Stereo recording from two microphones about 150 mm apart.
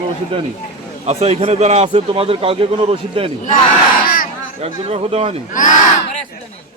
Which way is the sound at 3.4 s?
65° left (ahead or behind).